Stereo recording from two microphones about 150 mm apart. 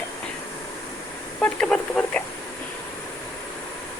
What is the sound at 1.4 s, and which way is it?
Speech, 5° left (ahead or behind).